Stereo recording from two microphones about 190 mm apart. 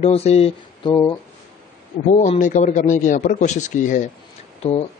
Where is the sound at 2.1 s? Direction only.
40° left (ahead or behind).